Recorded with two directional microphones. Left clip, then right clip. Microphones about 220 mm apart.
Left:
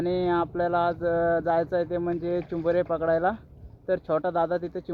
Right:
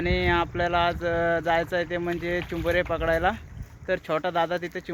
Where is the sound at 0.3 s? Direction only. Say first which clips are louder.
Right 2 dB; 20° right (ahead or behind).